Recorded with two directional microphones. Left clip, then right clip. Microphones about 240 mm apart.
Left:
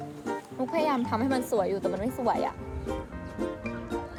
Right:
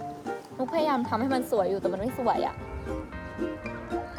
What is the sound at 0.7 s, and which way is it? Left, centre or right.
Speech, centre.